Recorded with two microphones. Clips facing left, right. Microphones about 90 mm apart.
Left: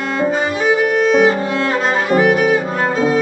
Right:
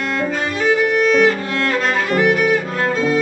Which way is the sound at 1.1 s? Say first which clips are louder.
Left 2 dB; 15° left (ahead or behind).